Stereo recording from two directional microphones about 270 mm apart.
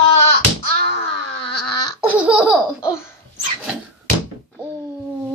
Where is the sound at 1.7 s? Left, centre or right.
Centre.